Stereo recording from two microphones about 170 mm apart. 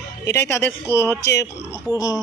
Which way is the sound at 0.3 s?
15° left (ahead or behind).